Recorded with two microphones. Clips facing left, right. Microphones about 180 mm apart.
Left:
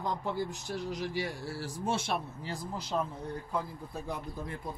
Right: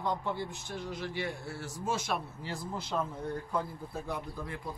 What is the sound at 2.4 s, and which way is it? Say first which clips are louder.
Speech: even; 15° left (ahead or behind).